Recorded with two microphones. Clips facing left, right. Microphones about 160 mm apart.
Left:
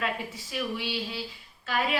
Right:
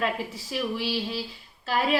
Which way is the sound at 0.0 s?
35° right (ahead or behind).